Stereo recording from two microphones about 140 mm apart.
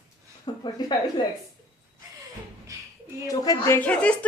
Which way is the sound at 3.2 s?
25° left (ahead or behind).